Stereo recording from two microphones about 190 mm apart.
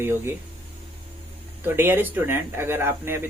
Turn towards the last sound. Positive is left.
turn(degrees=-10)  # may be behind; listen again after turning